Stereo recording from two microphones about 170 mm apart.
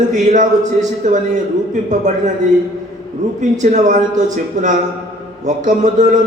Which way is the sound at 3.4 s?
45° right (ahead or behind).